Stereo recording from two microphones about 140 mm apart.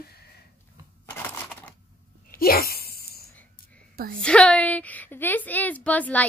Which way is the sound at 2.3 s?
90° left.